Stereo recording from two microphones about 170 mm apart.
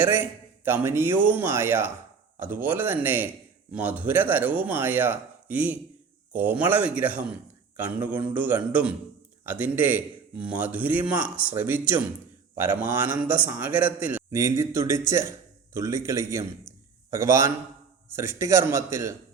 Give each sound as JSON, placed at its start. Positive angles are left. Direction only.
{"t": 0.0, "sound": "a man's voice", "side_deg": -10}